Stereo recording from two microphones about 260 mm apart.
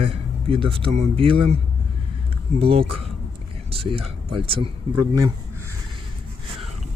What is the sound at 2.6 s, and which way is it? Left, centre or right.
Speech, right.